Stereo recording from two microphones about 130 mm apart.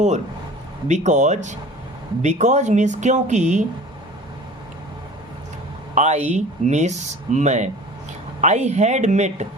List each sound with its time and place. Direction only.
0.9 s speech: 65° right (ahead or behind)
5.9 s speech: 65° right (ahead or behind)